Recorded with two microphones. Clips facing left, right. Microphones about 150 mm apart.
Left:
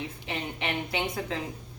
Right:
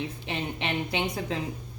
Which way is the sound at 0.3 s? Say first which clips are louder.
Right 1 dB; 20° right (ahead or behind).